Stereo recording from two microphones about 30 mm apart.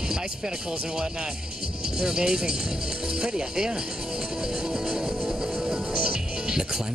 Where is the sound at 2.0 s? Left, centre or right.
Right.